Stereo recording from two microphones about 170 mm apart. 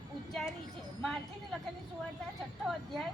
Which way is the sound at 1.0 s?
Centre (ahead or behind).